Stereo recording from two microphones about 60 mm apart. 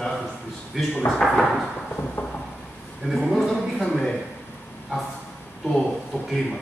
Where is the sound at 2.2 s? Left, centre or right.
Left.